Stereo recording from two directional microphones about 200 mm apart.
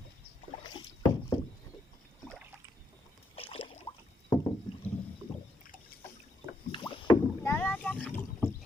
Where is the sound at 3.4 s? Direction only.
30° left (ahead or behind).